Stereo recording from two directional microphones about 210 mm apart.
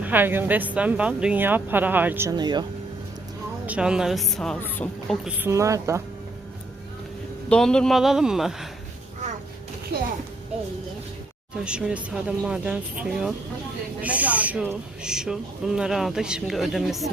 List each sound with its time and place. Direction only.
0.0 s speech: 10° right (ahead or behind)
3.7 s speech: 5° right (ahead or behind)
5.2 s speech: 10° right (ahead or behind)
7.5 s speech: 5° left (ahead or behind)
9.9 s speech: 50° right (ahead or behind)
11.6 s speech: 5° right (ahead or behind)